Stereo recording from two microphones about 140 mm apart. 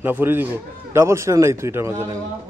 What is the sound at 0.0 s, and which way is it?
A man's voice, 15° right (ahead or behind).